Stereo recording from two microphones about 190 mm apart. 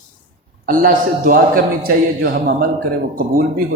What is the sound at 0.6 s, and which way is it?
A man's voice, 45° right (ahead or behind).